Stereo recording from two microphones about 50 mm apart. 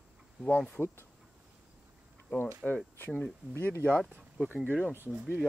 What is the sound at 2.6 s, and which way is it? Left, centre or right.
Speech, centre.